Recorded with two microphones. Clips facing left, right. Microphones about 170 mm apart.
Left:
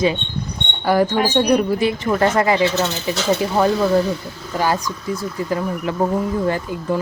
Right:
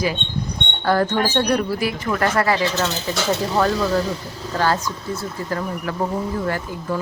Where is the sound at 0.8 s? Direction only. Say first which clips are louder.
Left 2 dB; 10° left (ahead or behind).